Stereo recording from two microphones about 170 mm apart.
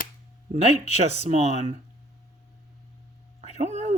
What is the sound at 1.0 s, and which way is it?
Speech, 40° right (ahead or behind).